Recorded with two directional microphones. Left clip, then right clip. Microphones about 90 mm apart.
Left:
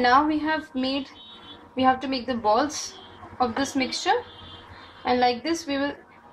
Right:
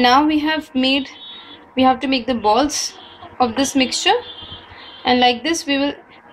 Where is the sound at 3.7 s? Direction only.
25° right (ahead or behind).